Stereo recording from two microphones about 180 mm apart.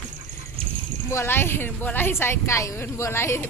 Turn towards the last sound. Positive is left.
turn(degrees=15)  # may be behind; listen again after turning